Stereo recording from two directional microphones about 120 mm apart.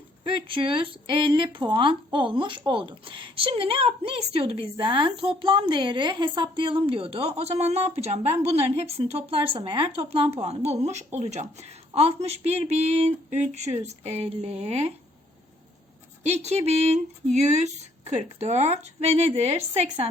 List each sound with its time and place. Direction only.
0.3 s speech: 45° right (ahead or behind); by 11.4 s 70° right (ahead or behind)
11.9 s speech: 60° right (ahead or behind)
16.2 s speech: 65° right (ahead or behind)